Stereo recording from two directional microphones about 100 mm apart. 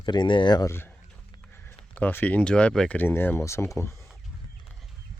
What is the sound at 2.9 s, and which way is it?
Speech, 20° left (ahead or behind).